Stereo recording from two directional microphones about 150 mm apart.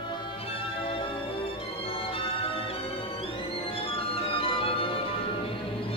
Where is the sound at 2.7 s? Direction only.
40° left (ahead or behind).